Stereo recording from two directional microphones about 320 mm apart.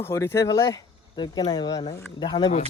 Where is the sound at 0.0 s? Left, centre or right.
Centre.